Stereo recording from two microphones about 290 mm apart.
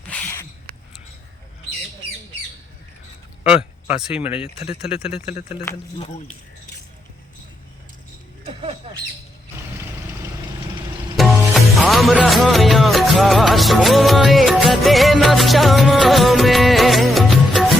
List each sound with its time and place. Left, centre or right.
0.1 s a sound: centre
3.4 s speech: centre
5.1 s speech: left
11.2 s music: centre